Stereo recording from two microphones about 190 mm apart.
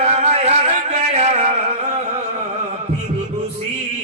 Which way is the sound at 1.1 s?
35° right (ahead or behind).